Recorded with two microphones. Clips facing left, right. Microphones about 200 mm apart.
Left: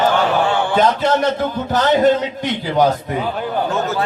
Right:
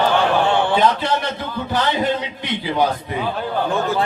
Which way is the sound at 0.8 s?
45° left (ahead or behind).